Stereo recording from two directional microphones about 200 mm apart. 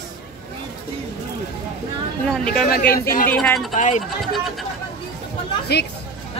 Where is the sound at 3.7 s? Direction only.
35° left (ahead or behind).